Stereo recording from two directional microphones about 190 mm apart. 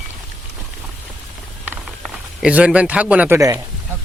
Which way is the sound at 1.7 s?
5° right (ahead or behind).